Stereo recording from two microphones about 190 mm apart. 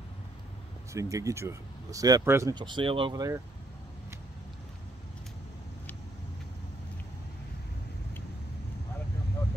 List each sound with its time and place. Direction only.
0.9 s speech: 15° right (ahead or behind)